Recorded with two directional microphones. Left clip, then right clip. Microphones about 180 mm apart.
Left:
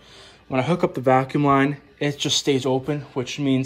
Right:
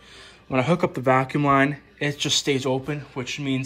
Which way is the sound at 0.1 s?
20° left (ahead or behind).